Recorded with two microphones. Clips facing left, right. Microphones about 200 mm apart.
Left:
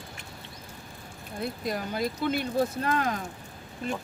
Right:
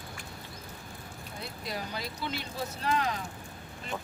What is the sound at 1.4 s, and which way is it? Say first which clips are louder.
Speech: left 7 dB; 50° left (ahead or behind).